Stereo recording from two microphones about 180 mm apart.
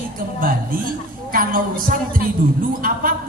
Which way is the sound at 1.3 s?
50° right (ahead or behind).